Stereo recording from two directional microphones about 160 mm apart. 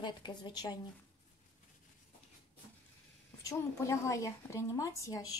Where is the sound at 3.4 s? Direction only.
20° left (ahead or behind).